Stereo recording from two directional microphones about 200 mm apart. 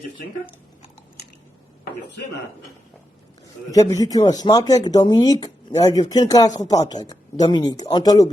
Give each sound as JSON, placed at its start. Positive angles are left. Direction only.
{"t": 3.7, "sound": "speech", "side_deg": 15}